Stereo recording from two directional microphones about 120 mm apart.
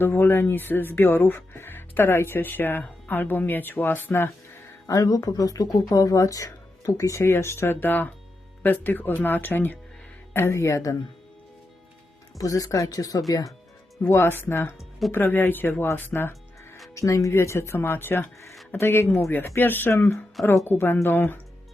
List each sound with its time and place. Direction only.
0.0 s speech: 15° left (ahead or behind)
12.4 s speech: 30° left (ahead or behind)
14.0 s speech: 20° left (ahead or behind)